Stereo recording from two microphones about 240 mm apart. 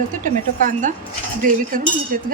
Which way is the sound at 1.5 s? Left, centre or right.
Right.